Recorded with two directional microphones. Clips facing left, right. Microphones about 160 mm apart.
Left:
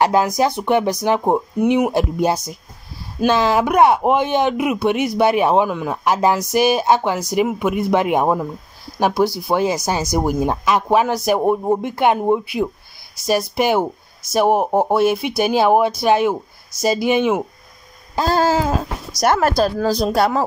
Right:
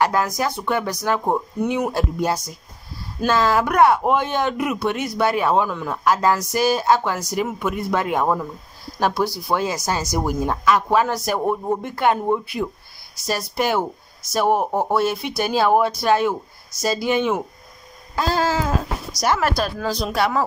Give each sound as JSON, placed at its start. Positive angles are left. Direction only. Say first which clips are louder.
{"t": 0.0, "sound": "speech", "louder": "left 4 dB", "side_deg": 25}
{"t": 18.3, "sound": "a sound", "louder": "left 5 dB", "side_deg": 40}
{"t": 19.1, "sound": "speech", "louder": "left 5 dB", "side_deg": 45}